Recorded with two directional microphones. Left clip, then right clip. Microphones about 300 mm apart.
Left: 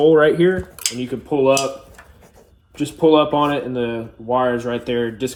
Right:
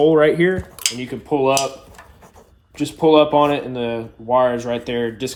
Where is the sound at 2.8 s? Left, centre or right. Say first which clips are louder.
Right 1 dB; right.